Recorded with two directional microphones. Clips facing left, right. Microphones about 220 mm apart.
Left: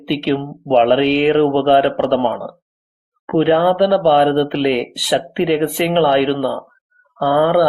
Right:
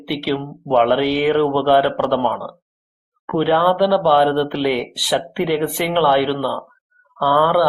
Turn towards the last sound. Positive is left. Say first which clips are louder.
# left 3 dB
turn(degrees=20)  # may be behind; listen again after turning